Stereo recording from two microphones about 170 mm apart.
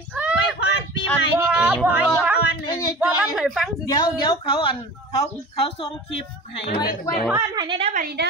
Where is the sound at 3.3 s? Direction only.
Centre (ahead or behind).